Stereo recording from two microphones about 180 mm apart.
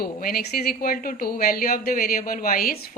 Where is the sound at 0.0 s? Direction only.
55° left (ahead or behind).